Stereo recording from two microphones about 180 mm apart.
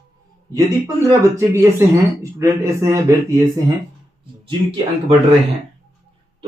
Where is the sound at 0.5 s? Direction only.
20° right (ahead or behind).